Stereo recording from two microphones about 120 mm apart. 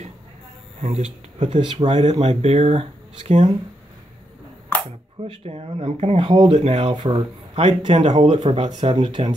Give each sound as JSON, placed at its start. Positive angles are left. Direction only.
{"t": 0.7, "sound": "speech", "side_deg": -65}
{"t": 5.2, "sound": "speech", "side_deg": -55}
{"t": 6.3, "sound": "speech", "side_deg": -45}
{"t": 6.6, "sound": "speech", "side_deg": -60}
{"t": 7.5, "sound": "speech", "side_deg": -45}
{"t": 8.1, "sound": "speech", "side_deg": -65}
{"t": 8.6, "sound": "speech", "side_deg": -35}